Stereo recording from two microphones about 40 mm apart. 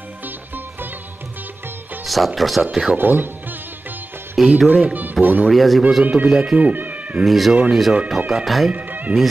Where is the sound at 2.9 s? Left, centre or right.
Right.